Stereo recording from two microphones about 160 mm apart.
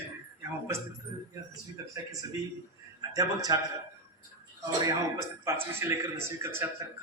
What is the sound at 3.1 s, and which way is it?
Speech, 20° right (ahead or behind).